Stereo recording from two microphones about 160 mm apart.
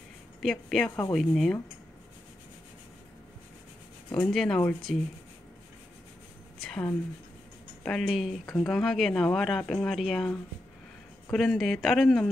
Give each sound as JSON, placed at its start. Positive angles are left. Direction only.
{"t": 0.4, "sound": "speech", "side_deg": 0}
{"t": 4.1, "sound": "speech", "side_deg": 5}
{"t": 6.6, "sound": "a woman's voice", "side_deg": 5}